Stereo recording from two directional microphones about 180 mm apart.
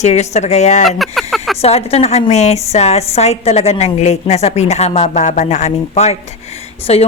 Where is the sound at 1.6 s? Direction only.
35° left (ahead or behind).